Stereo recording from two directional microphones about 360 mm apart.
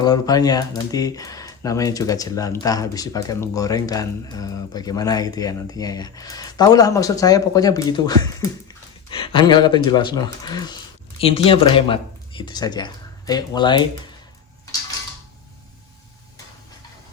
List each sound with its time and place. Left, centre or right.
0.0 s speech: centre